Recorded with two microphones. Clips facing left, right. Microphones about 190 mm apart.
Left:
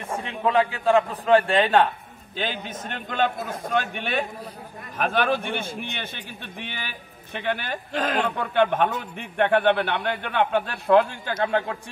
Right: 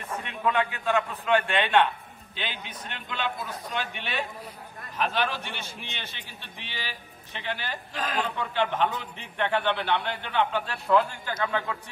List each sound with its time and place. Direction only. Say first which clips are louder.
0.1 s a man's voice: left 5 dB; 30° left (ahead or behind); by 8.0 s 55° left (ahead or behind)
8.0 s a man's voice: left 4 dB; 65° left (ahead or behind)